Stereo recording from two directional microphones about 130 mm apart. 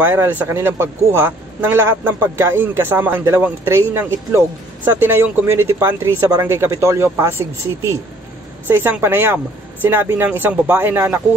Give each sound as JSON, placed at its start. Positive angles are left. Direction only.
{"t": 0.0, "sound": "speech", "side_deg": -15}